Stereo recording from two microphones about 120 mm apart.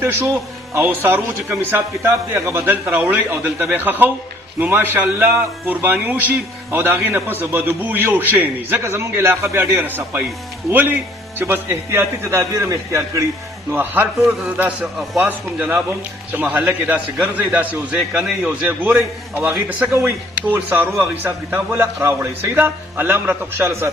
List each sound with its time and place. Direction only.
0.7 s a man's voice: 20° right (ahead or behind)